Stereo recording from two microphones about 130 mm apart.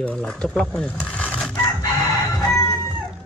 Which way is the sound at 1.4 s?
10° left (ahead or behind).